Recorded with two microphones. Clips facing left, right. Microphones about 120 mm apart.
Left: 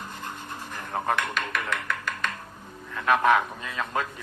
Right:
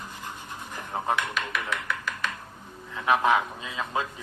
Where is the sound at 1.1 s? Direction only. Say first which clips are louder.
Left 1 dB; 55° left (ahead or behind).